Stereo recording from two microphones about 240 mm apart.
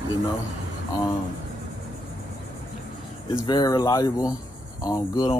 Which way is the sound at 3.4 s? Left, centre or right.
Centre.